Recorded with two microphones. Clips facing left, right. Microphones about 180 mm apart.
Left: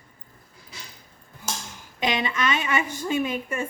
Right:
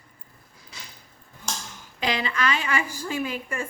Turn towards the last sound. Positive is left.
turn(degrees=20)  # may be behind; listen again after turning